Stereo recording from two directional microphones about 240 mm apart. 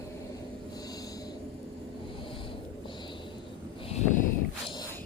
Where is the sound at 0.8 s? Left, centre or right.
Centre.